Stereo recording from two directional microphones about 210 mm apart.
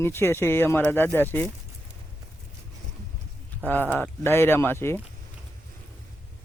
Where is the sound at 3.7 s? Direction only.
10° left (ahead or behind).